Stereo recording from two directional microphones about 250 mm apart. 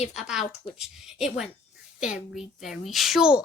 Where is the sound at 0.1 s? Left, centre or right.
Centre.